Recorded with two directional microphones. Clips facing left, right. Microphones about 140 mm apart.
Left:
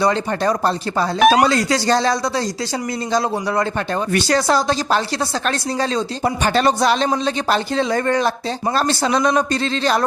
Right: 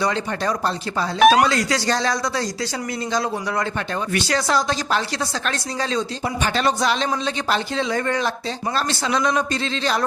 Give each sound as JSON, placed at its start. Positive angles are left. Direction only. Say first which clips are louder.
{"t": 0.0, "sound": "a man's voice", "louder": "left 5 dB", "side_deg": 35}
{"t": 1.2, "sound": "speech", "louder": "even", "side_deg": 0}
{"t": 1.5, "sound": "a man's voice", "louder": "left 4 dB", "side_deg": 30}